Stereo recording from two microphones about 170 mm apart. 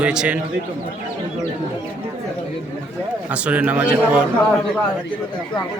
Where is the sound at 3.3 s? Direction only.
10° right (ahead or behind).